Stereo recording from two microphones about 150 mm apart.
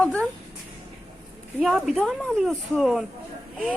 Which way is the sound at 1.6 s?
Centre (ahead or behind).